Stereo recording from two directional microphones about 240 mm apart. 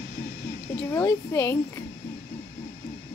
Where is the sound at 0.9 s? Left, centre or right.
Centre.